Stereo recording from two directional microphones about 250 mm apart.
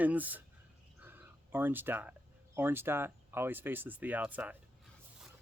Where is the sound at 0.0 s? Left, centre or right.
Centre.